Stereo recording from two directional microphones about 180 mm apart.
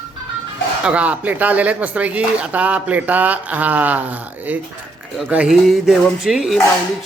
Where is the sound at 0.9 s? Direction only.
5° right (ahead or behind).